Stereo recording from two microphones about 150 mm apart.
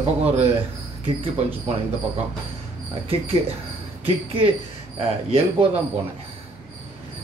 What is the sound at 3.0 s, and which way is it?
Speech, 40° right (ahead or behind).